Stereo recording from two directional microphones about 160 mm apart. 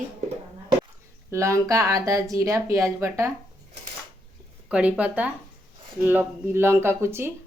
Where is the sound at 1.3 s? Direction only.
20° right (ahead or behind).